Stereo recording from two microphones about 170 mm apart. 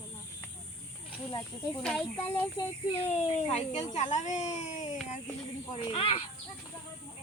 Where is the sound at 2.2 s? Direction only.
15° left (ahead or behind).